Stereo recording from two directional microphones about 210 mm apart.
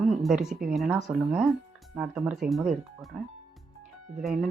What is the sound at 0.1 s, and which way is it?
Speech, centre (ahead or behind).